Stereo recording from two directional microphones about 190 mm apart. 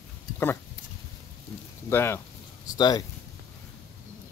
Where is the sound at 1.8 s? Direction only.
15° left (ahead or behind).